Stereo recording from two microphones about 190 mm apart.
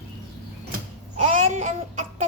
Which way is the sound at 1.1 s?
35° right (ahead or behind).